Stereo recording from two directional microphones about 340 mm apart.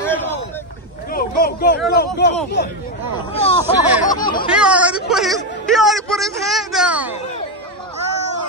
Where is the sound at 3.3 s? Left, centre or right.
Centre.